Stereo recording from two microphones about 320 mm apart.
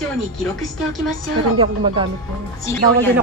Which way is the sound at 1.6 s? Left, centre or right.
Centre.